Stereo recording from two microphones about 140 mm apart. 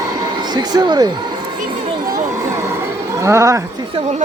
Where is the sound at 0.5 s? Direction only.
30° right (ahead or behind).